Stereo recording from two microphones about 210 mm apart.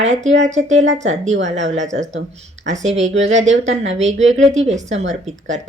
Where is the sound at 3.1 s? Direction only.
65° right (ahead or behind).